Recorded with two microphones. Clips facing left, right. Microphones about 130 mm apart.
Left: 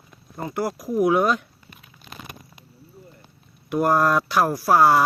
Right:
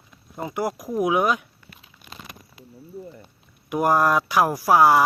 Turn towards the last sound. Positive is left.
turn(degrees=-10)  # may be behind; listen again after turning